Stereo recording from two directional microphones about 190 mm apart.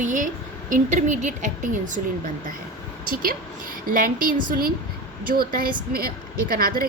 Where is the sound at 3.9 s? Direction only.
45° right (ahead or behind).